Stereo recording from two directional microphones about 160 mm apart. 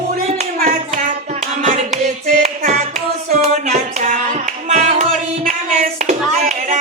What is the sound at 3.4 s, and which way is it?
Music, 45° right (ahead or behind).